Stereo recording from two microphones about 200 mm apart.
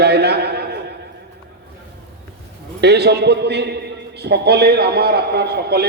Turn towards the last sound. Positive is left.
turn(degrees=-55)  # may be behind; listen again after turning